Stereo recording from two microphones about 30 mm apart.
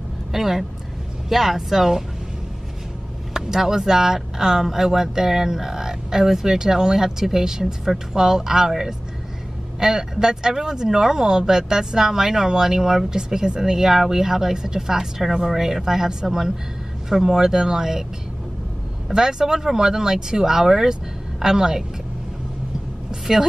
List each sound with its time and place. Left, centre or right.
0.3 s speech: centre
3.3 s speech: centre
19.0 s speech: centre